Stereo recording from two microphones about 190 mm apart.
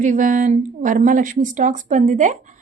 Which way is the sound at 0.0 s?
40° right (ahead or behind).